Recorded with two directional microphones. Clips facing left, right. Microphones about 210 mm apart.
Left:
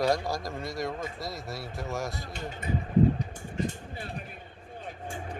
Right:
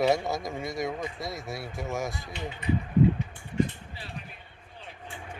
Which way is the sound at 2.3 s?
45° left (ahead or behind).